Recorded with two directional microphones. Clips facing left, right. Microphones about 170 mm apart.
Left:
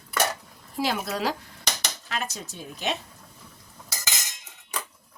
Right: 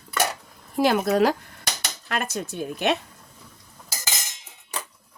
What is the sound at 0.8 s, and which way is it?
Speech, 55° right (ahead or behind).